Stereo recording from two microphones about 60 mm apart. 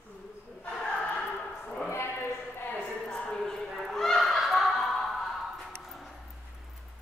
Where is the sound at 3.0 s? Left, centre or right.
Centre.